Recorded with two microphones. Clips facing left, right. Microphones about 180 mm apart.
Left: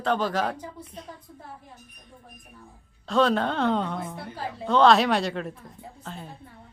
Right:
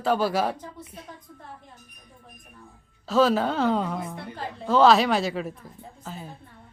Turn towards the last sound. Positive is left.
turn(degrees=-5)  # may be behind; listen again after turning